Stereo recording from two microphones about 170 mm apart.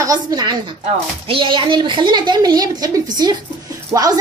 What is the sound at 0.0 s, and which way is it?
A woman's voice, 20° right (ahead or behind).